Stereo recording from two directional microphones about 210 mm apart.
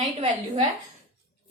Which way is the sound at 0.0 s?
35° right (ahead or behind).